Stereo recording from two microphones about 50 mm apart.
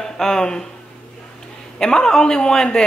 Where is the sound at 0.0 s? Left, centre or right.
Centre.